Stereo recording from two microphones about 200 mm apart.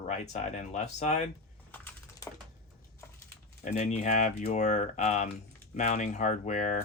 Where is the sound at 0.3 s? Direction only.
35° left (ahead or behind).